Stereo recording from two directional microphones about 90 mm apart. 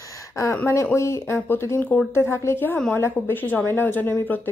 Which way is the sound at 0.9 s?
30° left (ahead or behind).